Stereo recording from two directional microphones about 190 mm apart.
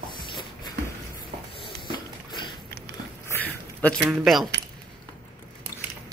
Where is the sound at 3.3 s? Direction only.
10° left (ahead or behind).